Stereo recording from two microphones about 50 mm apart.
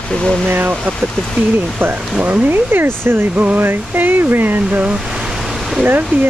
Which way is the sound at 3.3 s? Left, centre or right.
Right.